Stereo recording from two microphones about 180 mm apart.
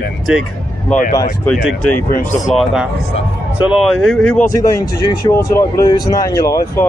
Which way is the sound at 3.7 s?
Centre (ahead or behind).